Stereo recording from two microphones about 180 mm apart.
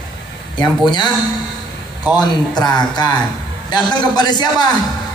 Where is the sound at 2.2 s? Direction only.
25° left (ahead or behind).